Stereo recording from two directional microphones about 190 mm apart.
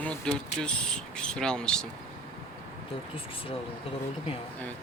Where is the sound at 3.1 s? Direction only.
30° left (ahead or behind).